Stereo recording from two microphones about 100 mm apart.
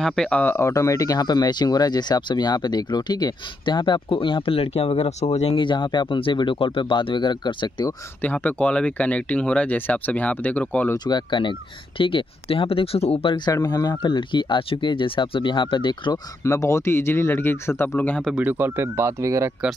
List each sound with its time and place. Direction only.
0.0 s speech: 5° left (ahead or behind)
0.6 s speech: 30° left (ahead or behind); by 5.6 s 80° left
5.6 s speech: 50° left (ahead or behind)
8.2 s speech: 15° left (ahead or behind)
11.1 s speech: 50° left (ahead or behind); by 13.4 s 75° left (ahead or behind)
13.5 s speech: 40° left (ahead or behind)
16.4 s speech: 30° left (ahead or behind)
18.4 s speech: 20° right (ahead or behind)